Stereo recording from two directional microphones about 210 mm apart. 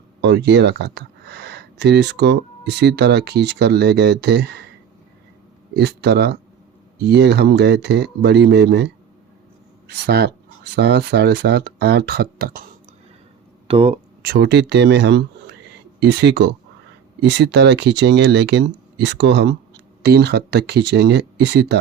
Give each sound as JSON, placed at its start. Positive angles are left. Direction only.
{"t": 0.2, "sound": "speech", "side_deg": -55}
{"t": 5.7, "sound": "speech", "side_deg": -55}
{"t": 13.7, "sound": "speech", "side_deg": -25}
{"t": 14.2, "sound": "speech", "side_deg": -45}